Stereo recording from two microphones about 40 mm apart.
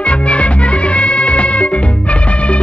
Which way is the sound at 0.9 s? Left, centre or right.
Left.